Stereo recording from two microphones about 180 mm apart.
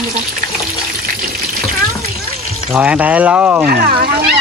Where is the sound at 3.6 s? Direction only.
55° right (ahead or behind).